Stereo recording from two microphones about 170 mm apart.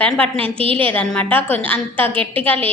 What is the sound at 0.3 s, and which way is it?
Speech, 35° right (ahead or behind).